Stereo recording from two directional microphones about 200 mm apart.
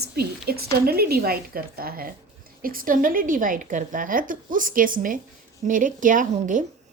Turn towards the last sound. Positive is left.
turn(degrees=-40)  # may be behind; listen again after turning